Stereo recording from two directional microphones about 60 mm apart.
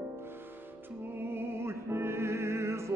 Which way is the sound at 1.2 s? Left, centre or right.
Right.